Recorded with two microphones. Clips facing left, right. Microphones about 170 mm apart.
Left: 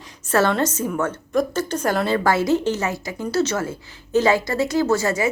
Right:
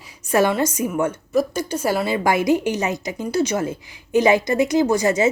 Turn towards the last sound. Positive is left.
turn(degrees=-20)  # may be behind; listen again after turning